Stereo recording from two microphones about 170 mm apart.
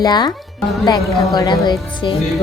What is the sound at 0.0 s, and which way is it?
Speech, 25° left (ahead or behind).